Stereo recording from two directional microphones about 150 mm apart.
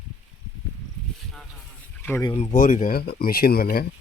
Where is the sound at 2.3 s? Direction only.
55° left (ahead or behind); by 3.9 s 90° left.